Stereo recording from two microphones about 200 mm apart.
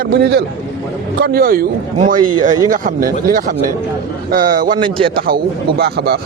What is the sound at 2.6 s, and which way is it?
Speech, 45° right (ahead or behind).